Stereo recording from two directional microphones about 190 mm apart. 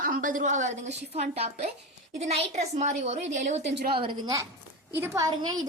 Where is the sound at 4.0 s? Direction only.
25° right (ahead or behind).